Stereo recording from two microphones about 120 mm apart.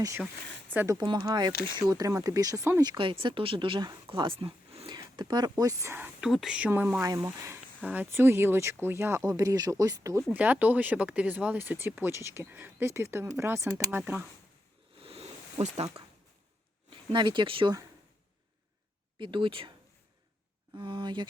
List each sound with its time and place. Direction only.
0.7 s speech: 15° right (ahead or behind)
0.9 s speech: 35° right (ahead or behind)
3.0 s speech: 45° right (ahead or behind)
4.9 s speech: 40° right (ahead or behind); by 6.2 s 20° right (ahead or behind)
6.2 s speech: 5° right (ahead or behind); by 10.2 s 25° right (ahead or behind)
10.3 s speech: 10° right (ahead or behind)
15.0 s a sound: 55° right (ahead or behind)
15.6 s speech: 60° right (ahead or behind)
16.9 s speech: 40° right (ahead or behind)
19.2 s speech: 45° right (ahead or behind)
20.7 s speech: 40° right (ahead or behind)